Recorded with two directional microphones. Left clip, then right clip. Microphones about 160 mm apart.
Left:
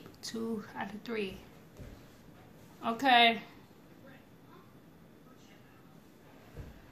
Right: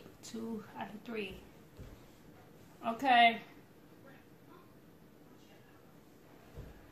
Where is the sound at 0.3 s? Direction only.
20° left (ahead or behind).